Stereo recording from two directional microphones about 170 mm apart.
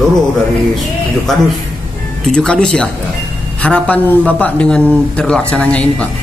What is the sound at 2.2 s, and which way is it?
Speech, 5° left (ahead or behind).